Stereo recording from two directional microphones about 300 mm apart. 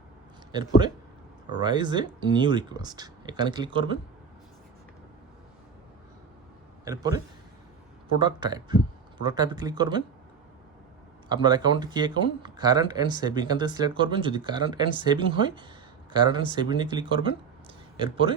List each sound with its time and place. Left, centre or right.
1.5 s speech: centre
6.8 s speech: centre
8.2 s speech: centre
11.3 s speech: centre